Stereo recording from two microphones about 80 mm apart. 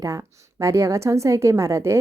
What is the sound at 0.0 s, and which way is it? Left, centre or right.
A woman's voice, right.